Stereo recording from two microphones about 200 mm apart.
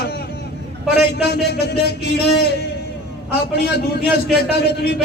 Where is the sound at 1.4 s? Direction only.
55° left (ahead or behind).